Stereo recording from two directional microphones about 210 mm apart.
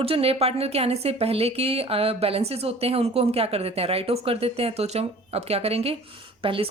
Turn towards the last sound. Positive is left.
turn(degrees=-25)  # may be behind; listen again after turning